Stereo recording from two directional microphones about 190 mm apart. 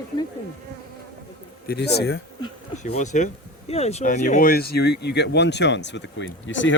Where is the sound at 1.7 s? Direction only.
60° left (ahead or behind).